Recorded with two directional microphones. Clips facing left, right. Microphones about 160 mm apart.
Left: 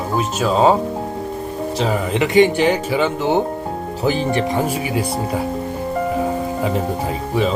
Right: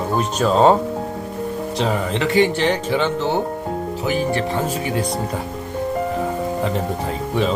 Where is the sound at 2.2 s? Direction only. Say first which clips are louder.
Left 4 dB; 15° left (ahead or behind).